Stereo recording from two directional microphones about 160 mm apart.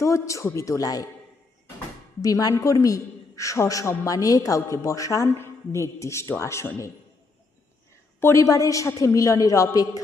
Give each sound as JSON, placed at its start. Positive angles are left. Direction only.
{"t": 0.0, "sound": "a woman's voice", "side_deg": 20}
{"t": 2.2, "sound": "a woman's voice", "side_deg": 20}
{"t": 8.2, "sound": "a woman's voice", "side_deg": 20}